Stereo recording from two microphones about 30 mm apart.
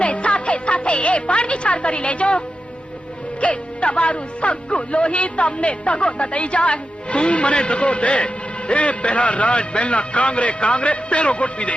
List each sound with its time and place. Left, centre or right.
0.0 s music: left
3.4 s a man's voice: left